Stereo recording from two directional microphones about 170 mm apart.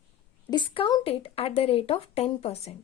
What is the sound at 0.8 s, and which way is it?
Speech, 30° left (ahead or behind).